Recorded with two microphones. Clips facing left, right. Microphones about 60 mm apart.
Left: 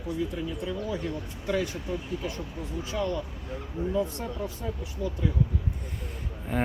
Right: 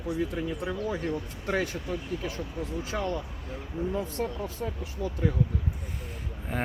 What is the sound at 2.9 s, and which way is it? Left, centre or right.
Speech, right.